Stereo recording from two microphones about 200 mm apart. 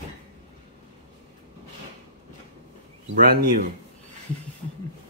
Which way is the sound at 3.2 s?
45° right (ahead or behind).